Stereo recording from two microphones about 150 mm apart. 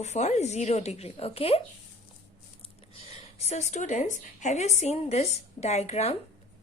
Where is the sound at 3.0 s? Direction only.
45° left (ahead or behind).